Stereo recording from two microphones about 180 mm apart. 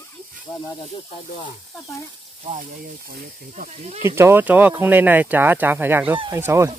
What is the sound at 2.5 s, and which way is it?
Speech, 45° right (ahead or behind).